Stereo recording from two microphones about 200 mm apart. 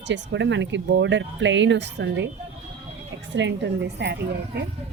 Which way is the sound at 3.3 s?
60° right (ahead or behind).